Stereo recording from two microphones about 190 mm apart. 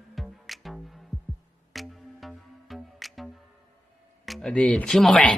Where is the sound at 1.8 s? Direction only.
Centre (ahead or behind).